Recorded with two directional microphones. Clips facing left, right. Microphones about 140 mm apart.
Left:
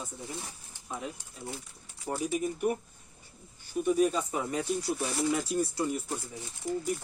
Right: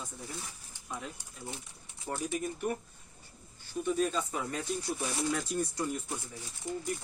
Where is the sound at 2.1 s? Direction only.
10° left (ahead or behind).